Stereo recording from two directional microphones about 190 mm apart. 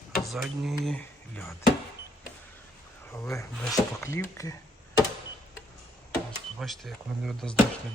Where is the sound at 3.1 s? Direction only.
15° left (ahead or behind).